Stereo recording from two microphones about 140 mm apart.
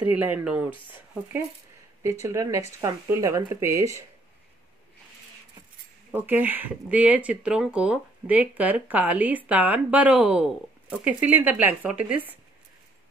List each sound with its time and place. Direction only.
0.1 s speech: 10° right (ahead or behind)
2.2 s speech: 20° right (ahead or behind)
6.1 s speech: 15° right (ahead or behind)